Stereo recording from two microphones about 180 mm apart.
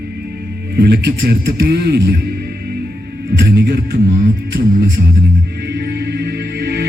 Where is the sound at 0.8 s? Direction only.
65° right (ahead or behind).